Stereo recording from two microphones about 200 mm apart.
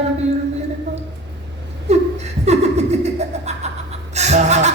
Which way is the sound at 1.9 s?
35° right (ahead or behind).